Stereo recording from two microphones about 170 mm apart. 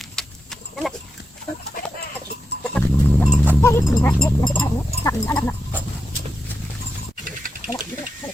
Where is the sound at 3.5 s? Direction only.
15° left (ahead or behind).